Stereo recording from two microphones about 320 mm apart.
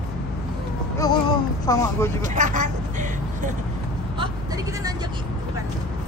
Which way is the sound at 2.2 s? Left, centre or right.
Right.